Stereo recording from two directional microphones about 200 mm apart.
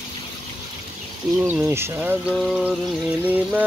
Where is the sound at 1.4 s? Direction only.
15° right (ahead or behind).